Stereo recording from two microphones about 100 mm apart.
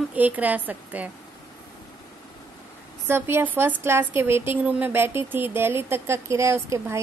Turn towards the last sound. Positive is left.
turn(degrees=-30)  # may be behind; listen again after turning